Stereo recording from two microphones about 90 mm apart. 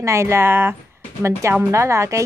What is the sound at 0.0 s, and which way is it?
Speech, 30° right (ahead or behind).